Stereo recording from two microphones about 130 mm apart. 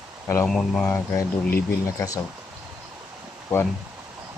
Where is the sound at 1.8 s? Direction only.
25° left (ahead or behind).